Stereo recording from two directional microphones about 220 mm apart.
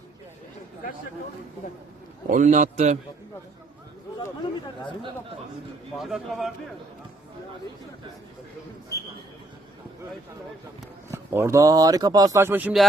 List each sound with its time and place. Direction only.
2.3 s a man's voice: 35° right (ahead or behind)
6.0 s speech: centre (ahead or behind)
11.1 s speech: 10° right (ahead or behind)